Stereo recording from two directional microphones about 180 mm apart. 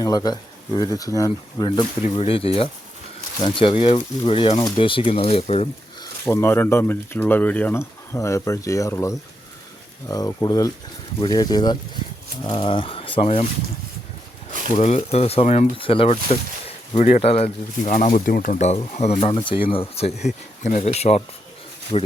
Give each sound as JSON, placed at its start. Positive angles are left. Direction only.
{"t": 0.0, "sound": "speech", "side_deg": 20}
{"t": 6.0, "sound": "speech", "side_deg": 15}
{"t": 14.8, "sound": "speech", "side_deg": 40}